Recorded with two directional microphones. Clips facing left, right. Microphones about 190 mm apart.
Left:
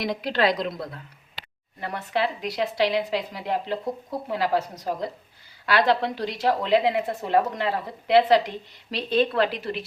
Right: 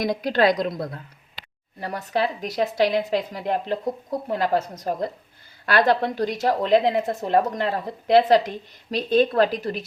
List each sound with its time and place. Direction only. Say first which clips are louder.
0.0 s a woman's voice: right 4 dB; 45° right (ahead or behind)